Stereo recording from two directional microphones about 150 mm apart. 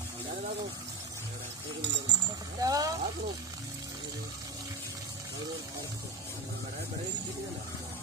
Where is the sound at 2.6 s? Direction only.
25° right (ahead or behind).